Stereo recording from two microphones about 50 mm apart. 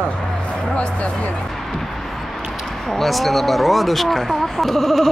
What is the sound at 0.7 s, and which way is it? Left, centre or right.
Speech, left.